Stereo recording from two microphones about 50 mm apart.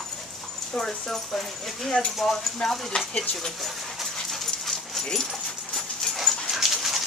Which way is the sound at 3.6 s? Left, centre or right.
Centre.